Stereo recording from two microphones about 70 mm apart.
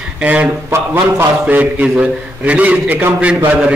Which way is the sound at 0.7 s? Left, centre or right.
Right.